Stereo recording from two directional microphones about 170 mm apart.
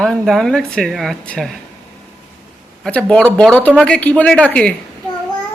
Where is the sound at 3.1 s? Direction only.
5° left (ahead or behind).